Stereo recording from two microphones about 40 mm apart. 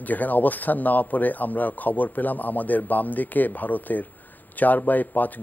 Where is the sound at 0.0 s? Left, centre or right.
Left.